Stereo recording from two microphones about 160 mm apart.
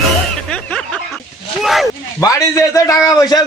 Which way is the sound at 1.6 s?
Centre (ahead or behind).